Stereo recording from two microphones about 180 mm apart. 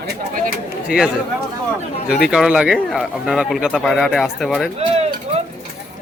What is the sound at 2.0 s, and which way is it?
Speech, 60° left (ahead or behind).